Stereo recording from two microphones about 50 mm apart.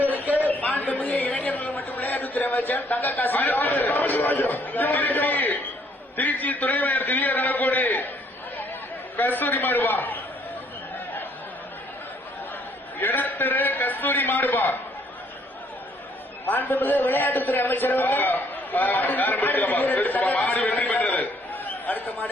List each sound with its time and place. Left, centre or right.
0.0 s a sound: right
0.3 s a sound: left
6.1 s a man's voice: left
9.1 s a man's voice: left
13.0 s a man's voice: left
16.5 s a man's voice: left